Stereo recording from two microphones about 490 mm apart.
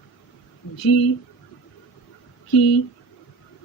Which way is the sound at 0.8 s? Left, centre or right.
Left.